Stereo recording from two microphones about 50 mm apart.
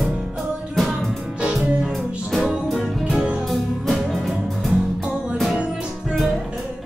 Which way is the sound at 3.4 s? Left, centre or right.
Centre.